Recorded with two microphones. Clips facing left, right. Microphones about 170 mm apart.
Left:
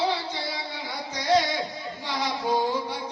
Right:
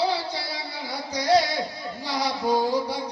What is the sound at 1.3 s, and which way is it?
Music, 35° right (ahead or behind).